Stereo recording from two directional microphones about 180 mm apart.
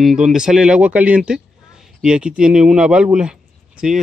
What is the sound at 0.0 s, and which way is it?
Speech, centre (ahead or behind).